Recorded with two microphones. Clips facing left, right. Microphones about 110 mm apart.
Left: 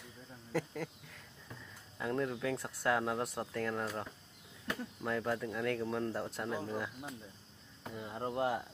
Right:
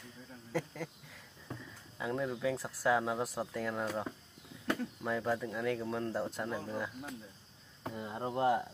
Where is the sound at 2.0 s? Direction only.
5° right (ahead or behind).